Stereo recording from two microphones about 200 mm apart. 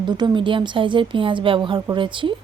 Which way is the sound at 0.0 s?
20° right (ahead or behind).